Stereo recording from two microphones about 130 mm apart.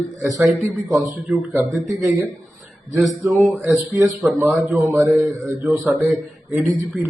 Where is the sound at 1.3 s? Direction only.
15° right (ahead or behind).